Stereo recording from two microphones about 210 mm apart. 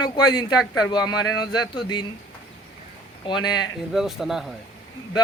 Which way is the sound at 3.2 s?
20° left (ahead or behind).